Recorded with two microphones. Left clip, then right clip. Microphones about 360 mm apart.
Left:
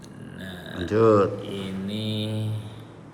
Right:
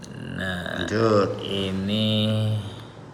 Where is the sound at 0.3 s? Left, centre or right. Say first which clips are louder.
Right 7 dB; centre.